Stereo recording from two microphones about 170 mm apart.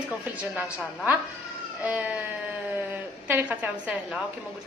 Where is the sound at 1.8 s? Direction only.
10° right (ahead or behind).